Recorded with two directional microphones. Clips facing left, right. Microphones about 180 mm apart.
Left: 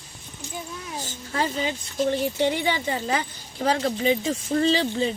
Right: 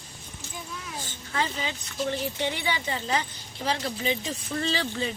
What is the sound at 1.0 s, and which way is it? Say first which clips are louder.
Speech: left 3 dB; 40° left (ahead or behind).